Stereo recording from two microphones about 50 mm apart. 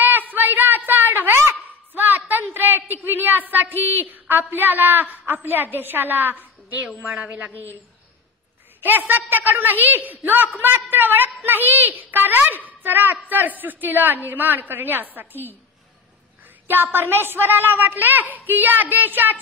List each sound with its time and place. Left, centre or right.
0.3 s a sound: right
3.0 s a woman's voice: right
6.3 s a sound: right
7.0 s a woman's voice: right
8.8 s a woman's voice: right
16.6 s a woman's voice: right